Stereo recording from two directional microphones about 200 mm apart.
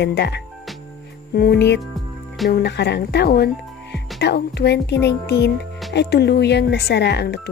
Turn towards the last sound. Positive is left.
turn(degrees=55)  # may be behind; listen again after turning